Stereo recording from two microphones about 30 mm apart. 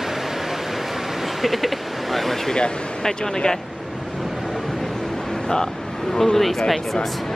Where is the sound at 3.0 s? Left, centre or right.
Left.